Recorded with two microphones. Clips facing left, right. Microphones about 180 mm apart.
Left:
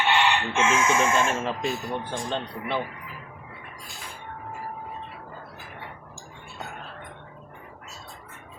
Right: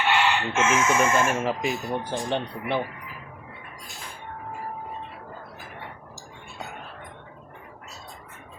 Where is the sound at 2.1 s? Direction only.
15° right (ahead or behind).